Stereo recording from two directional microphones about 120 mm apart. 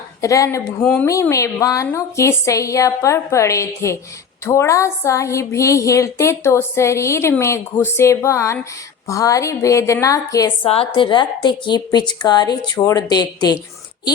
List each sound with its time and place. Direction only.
0.2 s a woman's voice: 25° left (ahead or behind)
10.6 s a woman's voice: 50° left (ahead or behind)